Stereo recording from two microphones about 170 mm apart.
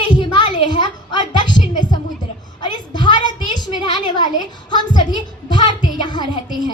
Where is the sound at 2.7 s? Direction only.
25° left (ahead or behind).